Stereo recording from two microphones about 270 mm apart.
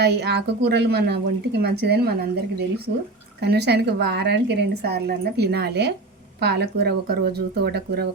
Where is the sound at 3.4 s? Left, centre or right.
Right.